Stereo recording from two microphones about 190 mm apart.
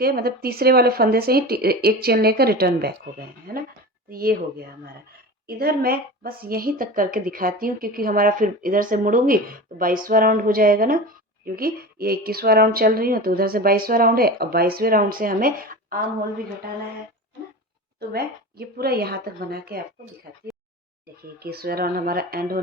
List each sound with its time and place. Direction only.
0.0 s a woman's voice: 55° right (ahead or behind)
18.1 s speech: 55° right (ahead or behind)
21.3 s a woman's voice: 55° right (ahead or behind)